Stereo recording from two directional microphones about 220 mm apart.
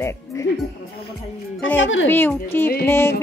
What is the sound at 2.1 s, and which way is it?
A woman's voice, 10° left (ahead or behind).